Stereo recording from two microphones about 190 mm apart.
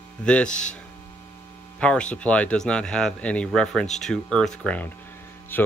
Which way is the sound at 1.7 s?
5° left (ahead or behind).